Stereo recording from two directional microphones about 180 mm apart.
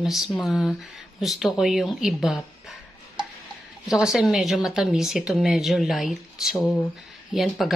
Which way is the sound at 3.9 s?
Centre (ahead or behind).